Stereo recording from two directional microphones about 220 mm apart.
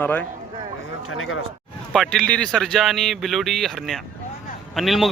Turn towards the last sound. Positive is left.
turn(degrees=0)  # may be behind; listen again after turning